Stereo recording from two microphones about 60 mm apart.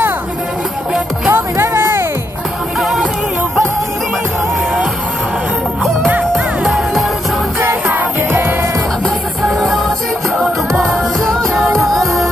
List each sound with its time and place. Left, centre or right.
1.3 s music: right
2.8 s music: centre
6.6 s music: centre
7.6 s music: right
9.4 s music: centre